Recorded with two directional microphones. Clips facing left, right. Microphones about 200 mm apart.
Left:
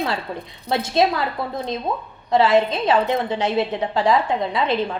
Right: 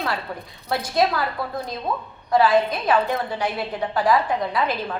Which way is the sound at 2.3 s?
25° left (ahead or behind).